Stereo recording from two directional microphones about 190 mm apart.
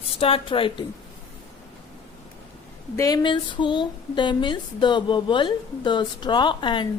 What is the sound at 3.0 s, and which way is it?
Speech, 20° left (ahead or behind).